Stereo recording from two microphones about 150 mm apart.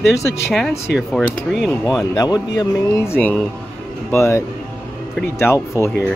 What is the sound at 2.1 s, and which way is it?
Speech, 25° left (ahead or behind).